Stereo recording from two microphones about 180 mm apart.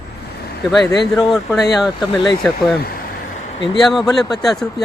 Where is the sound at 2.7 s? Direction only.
60° left (ahead or behind).